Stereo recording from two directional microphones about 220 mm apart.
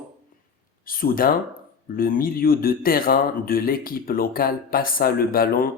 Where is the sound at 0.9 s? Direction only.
40° left (ahead or behind).